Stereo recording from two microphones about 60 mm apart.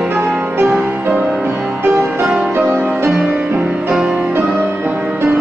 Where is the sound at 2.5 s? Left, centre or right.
Right.